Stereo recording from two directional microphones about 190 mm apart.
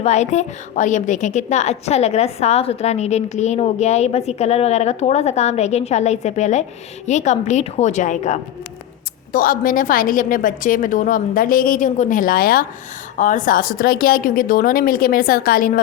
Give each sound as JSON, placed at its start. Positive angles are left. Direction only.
{"t": 0.0, "sound": "a woman's voice", "side_deg": 35}